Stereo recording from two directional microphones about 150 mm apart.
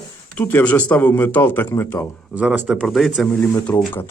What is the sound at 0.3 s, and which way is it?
Speech, 10° left (ahead or behind).